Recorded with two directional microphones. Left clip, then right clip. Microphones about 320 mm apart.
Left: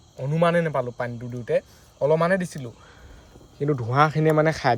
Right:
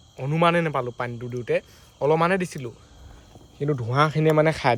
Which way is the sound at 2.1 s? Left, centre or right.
Centre.